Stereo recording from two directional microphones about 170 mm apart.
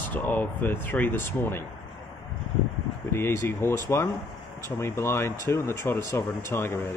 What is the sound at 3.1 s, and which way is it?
Speech, 15° left (ahead or behind).